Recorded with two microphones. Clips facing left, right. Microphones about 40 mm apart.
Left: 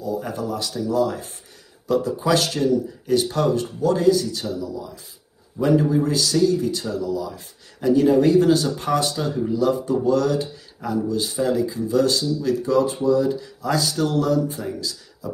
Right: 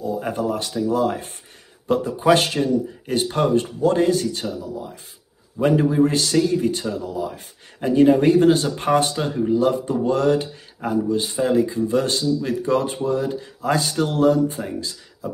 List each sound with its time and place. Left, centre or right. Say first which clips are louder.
0.0 s speech: right 3 dB; right